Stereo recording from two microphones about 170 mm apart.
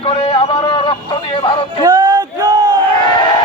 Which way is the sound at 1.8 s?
25° right (ahead or behind).